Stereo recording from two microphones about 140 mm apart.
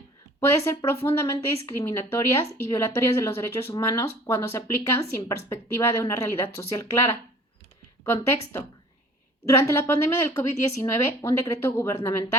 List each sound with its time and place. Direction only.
0.3 s a woman's voice: 20° left (ahead or behind)
9.5 s a woman's voice: 20° left (ahead or behind)